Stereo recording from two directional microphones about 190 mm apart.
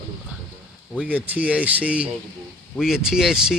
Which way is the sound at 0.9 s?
5° right (ahead or behind).